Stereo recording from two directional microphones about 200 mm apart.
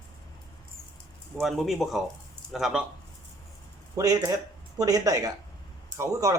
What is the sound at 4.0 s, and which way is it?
Speech, 15° right (ahead or behind).